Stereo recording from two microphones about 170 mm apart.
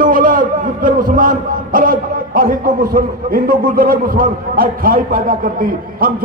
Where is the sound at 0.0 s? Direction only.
55° right (ahead or behind).